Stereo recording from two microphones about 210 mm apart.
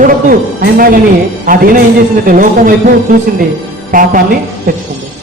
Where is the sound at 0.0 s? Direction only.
45° right (ahead or behind).